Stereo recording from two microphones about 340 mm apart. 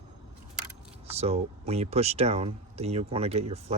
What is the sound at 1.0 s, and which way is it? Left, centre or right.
Speech, centre.